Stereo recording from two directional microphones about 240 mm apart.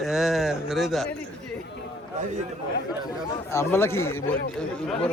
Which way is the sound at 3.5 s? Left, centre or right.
Centre.